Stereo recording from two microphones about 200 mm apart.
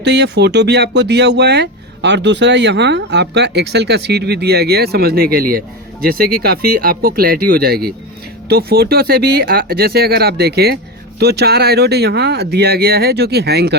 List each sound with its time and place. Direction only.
0.0 s speech: 60° right (ahead or behind)